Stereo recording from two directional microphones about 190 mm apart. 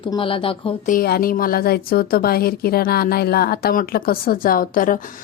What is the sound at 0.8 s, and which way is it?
A woman's voice, 50° left (ahead or behind).